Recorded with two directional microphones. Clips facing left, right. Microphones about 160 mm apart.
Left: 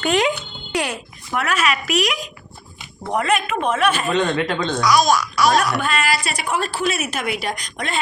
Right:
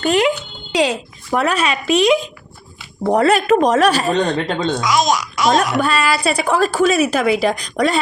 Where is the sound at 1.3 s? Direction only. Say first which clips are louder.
Right 4 dB; 30° right (ahead or behind).